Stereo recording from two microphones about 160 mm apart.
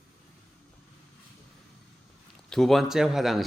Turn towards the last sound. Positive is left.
turn(degrees=0)  # may be behind; listen again after turning